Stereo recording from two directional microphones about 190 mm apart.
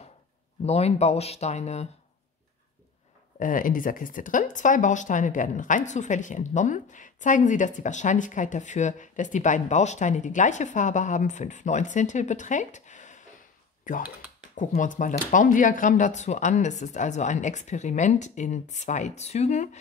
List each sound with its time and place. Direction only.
0.7 s speech: 35° left (ahead or behind)
3.3 s speech: 45° left (ahead or behind)